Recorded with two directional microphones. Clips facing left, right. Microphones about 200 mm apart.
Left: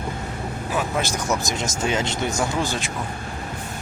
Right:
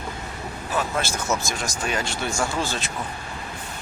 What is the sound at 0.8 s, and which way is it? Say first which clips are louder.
Speech: left 1 dB; 15° left (ahead or behind).